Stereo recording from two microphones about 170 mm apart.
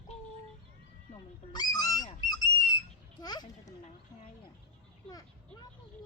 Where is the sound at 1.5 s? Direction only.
25° left (ahead or behind).